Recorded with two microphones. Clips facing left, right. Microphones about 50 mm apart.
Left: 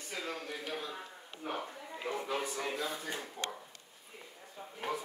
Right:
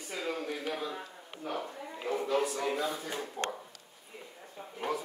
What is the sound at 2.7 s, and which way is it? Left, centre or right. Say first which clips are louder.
Speech: right 4 dB; centre.